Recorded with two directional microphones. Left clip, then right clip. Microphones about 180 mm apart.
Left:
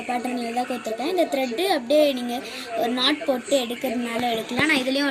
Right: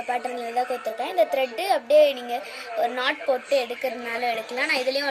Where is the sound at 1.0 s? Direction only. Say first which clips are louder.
Right 1 dB; 15° right (ahead or behind).